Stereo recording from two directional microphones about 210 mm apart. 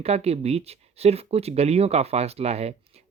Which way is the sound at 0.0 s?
30° right (ahead or behind).